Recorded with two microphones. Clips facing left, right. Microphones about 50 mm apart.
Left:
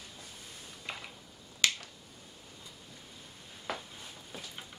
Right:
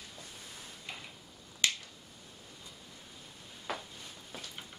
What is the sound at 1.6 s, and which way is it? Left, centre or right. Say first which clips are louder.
Finger snapping: left 2 dB; left.